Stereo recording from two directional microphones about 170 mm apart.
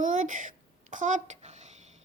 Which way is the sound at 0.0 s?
50° right (ahead or behind).